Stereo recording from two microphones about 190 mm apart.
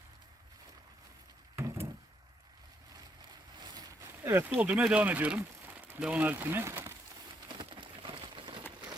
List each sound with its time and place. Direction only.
1.5 s vehicle: 15° right (ahead or behind)
3.6 s speech: 20° right (ahead or behind)
7.4 s a sound: 25° right (ahead or behind)